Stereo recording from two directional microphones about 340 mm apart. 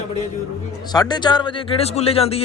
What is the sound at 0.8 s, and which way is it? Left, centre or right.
Speech, centre.